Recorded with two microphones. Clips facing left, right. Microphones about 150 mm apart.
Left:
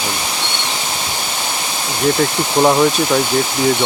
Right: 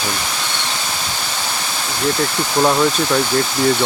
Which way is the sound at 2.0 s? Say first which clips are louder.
Left 4 dB; 20° left (ahead or behind).